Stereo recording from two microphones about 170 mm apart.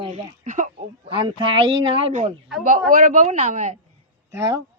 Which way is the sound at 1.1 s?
30° right (ahead or behind).